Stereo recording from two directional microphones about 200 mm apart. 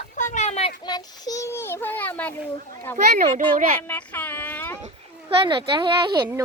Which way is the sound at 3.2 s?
45° right (ahead or behind).